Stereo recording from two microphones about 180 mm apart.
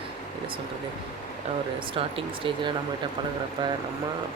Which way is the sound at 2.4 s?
30° right (ahead or behind).